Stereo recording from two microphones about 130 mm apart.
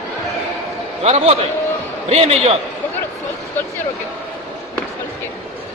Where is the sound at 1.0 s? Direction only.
55° right (ahead or behind).